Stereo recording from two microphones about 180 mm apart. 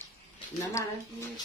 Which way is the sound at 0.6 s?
15° left (ahead or behind).